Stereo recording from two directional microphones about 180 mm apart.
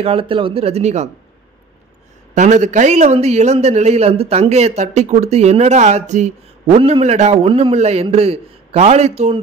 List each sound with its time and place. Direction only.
0.0 s a man's voice: 30° right (ahead or behind)
2.3 s a man's voice: 40° right (ahead or behind)